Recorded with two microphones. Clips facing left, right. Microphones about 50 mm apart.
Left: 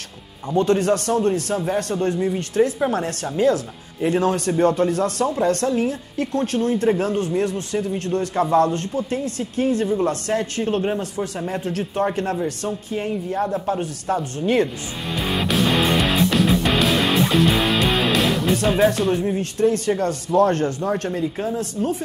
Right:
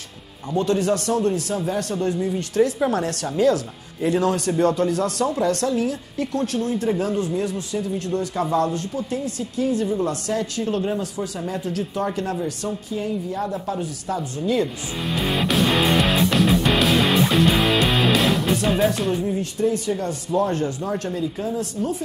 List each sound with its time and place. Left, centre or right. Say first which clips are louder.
0.6 s a woman's voice: left 2 dB; left
15.0 s music: even; centre
18.9 s speech: left 3 dB; centre
19.2 s a woman's voice: left 3 dB; left